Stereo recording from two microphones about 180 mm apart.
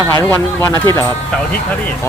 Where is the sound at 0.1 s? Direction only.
15° left (ahead or behind).